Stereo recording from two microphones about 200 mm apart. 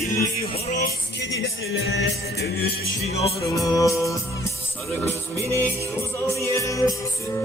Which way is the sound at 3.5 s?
15° left (ahead or behind).